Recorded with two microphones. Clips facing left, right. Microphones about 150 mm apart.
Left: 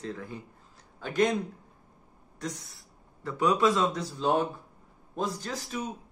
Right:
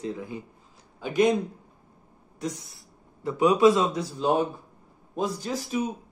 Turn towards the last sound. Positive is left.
turn(degrees=-10)  # may be behind; listen again after turning